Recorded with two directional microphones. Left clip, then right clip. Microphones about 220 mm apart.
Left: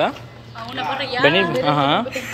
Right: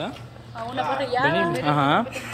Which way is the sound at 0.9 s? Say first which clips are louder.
Left 6 dB; 30° right (ahead or behind).